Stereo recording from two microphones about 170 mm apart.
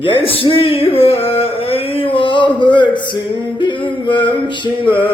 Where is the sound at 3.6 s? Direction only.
30° left (ahead or behind).